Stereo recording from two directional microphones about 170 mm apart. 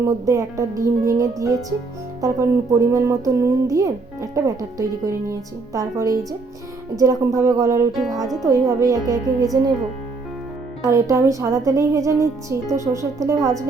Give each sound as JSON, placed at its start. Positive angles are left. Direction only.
{"t": 0.0, "sound": "speech", "side_deg": -20}
{"t": 7.9, "sound": "speech", "side_deg": 0}
{"t": 8.4, "sound": "speech", "side_deg": -20}
{"t": 10.8, "sound": "a woman's voice", "side_deg": -20}